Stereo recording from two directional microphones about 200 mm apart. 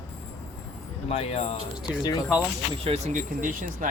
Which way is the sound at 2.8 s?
30° right (ahead or behind).